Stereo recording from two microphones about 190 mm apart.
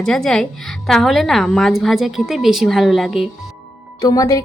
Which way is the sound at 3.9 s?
20° left (ahead or behind).